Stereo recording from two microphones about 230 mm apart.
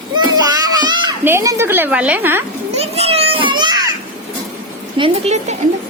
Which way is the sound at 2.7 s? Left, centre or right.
Right.